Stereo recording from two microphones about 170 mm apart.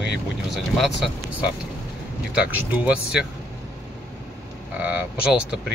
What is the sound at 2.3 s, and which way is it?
Speech, 10° right (ahead or behind).